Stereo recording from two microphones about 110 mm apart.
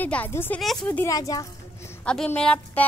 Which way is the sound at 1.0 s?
30° left (ahead or behind).